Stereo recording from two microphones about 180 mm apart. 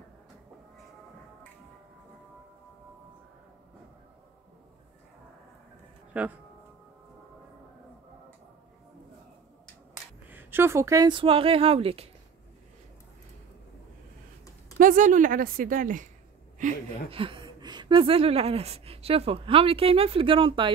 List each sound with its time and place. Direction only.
6.1 s speech: 10° right (ahead or behind)
10.3 s speech: 10° right (ahead or behind); by 12.1 s 35° right (ahead or behind)
14.8 s a woman's voice: 45° right (ahead or behind)
17.1 s speech: 30° right (ahead or behind)